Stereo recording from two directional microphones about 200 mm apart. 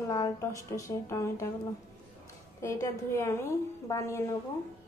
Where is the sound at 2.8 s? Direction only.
15° left (ahead or behind).